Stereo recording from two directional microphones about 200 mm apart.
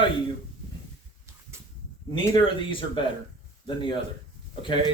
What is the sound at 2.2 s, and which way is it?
Speech, 25° left (ahead or behind).